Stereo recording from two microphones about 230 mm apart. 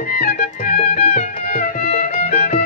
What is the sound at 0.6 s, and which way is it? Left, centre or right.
Music, left.